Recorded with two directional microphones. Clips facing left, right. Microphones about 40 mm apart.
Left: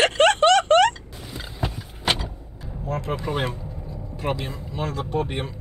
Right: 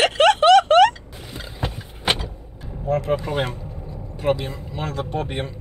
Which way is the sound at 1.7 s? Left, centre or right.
Right.